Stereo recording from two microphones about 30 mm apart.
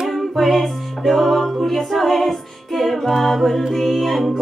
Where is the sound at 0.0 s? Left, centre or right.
Centre.